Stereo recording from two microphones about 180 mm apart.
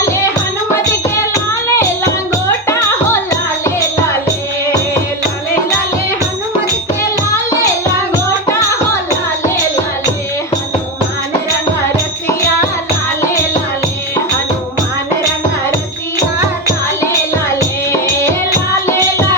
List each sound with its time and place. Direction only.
1.3 s music: 15° left (ahead or behind)